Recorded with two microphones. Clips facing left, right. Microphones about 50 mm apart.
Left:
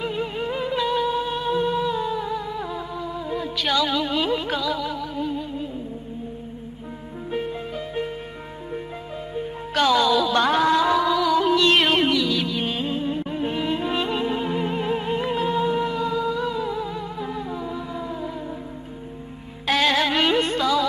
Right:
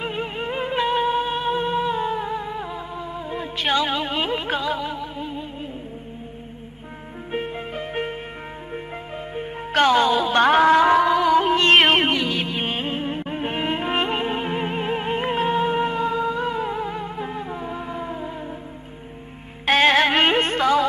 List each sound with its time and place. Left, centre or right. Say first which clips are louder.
0.0 s music: left 1 dB; right
7.2 s music: even; right
9.3 s music: right 2 dB; right
19.6 s music: right 4 dB; right